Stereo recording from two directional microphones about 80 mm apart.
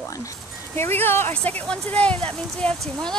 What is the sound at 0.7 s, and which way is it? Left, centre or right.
Speech, left.